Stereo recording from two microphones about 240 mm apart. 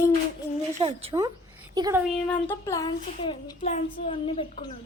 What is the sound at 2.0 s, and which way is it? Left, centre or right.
A child's voice, centre.